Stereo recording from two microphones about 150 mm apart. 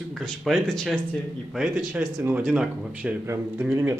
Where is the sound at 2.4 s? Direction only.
5° right (ahead or behind).